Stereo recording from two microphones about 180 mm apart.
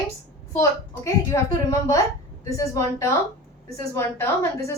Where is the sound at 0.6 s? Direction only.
15° left (ahead or behind).